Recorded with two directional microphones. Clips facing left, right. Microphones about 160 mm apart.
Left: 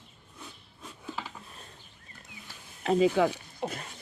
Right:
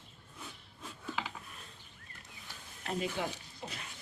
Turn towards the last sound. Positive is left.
turn(degrees=70)  # may be behind; listen again after turning